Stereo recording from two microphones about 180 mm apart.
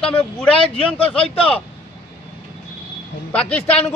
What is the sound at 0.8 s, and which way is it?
Speech, 30° left (ahead or behind).